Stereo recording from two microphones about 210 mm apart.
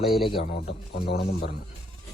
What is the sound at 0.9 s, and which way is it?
Speech, 50° left (ahead or behind).